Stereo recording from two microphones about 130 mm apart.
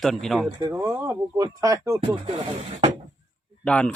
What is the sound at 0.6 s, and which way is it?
Speech, 25° right (ahead or behind).